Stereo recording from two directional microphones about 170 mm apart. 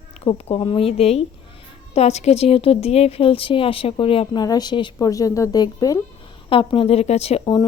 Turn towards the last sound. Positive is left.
turn(degrees=30)  # may be behind; listen again after turning